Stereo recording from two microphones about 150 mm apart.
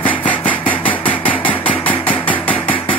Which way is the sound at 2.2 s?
10° left (ahead or behind).